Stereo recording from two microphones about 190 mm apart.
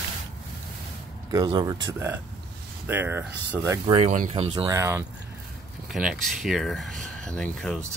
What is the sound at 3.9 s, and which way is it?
Speech, 40° right (ahead or behind).